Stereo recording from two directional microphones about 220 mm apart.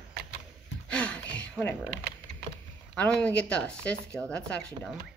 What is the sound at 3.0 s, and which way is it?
Speech, 5° left (ahead or behind).